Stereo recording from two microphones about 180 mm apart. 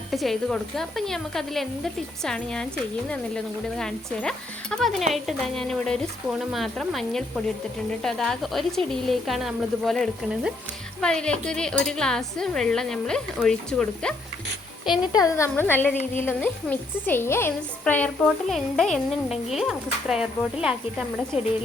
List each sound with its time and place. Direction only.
0.1 s speech: centre (ahead or behind)
15.1 s a woman's voice: 15° left (ahead or behind); by 20.7 s 5° right (ahead or behind)